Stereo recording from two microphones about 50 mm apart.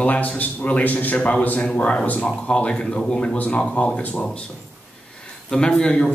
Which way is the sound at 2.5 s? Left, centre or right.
Left.